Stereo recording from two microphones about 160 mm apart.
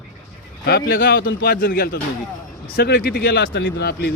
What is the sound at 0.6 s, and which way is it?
A man's voice, 75° left (ahead or behind).